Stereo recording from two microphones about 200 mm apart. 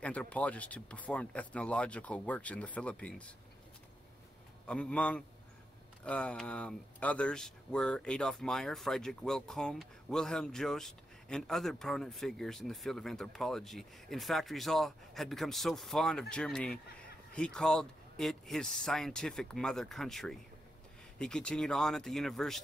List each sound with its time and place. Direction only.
0.0 s speech: 5° left (ahead or behind)
4.6 s speech: 5° left (ahead or behind)